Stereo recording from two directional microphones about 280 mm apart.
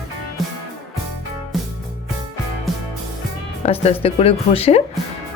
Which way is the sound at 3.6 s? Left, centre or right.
Left.